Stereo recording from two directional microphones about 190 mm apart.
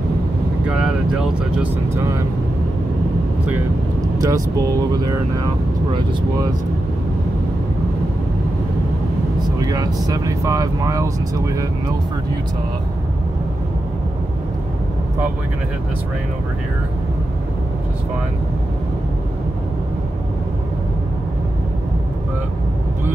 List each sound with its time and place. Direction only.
0.7 s speech: 5° right (ahead or behind)
4.2 s speech: 15° right (ahead or behind)
9.6 s vehicle: 20° right (ahead or behind)
10.0 s speech: 20° right (ahead or behind)